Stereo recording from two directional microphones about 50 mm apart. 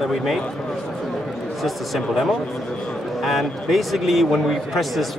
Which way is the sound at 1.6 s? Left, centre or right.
Centre.